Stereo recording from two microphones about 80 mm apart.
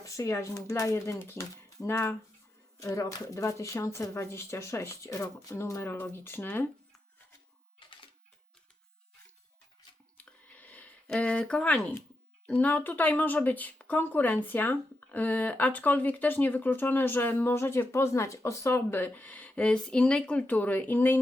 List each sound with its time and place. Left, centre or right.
0.0 s speech: left
5.9 s speech: left
10.2 s a sound: centre
11.0 s speech: centre
11.8 s speech: left
12.5 s speech: centre